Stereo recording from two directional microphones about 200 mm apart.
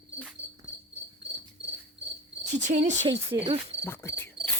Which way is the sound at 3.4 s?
30° right (ahead or behind).